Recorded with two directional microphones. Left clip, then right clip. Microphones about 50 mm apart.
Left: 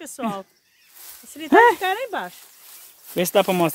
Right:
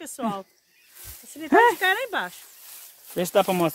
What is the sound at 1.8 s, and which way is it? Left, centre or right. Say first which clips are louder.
Speech: right 1 dB; right.